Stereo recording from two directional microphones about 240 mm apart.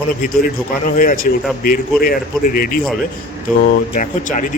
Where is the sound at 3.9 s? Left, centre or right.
Left.